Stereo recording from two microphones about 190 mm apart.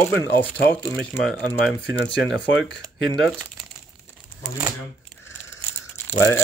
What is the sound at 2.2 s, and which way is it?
Speech, 70° left (ahead or behind).